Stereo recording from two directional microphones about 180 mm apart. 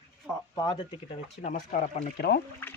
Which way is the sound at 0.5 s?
25° left (ahead or behind).